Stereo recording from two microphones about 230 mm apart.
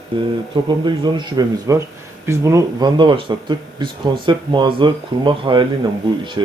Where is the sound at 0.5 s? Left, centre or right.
Centre.